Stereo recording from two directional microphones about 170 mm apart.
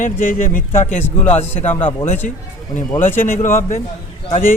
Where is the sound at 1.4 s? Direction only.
10° left (ahead or behind).